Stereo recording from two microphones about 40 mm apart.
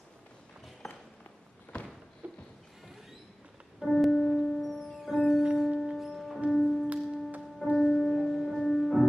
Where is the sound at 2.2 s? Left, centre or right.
Right.